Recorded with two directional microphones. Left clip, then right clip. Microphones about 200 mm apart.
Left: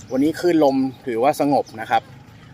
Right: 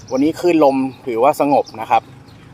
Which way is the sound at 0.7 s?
5° left (ahead or behind).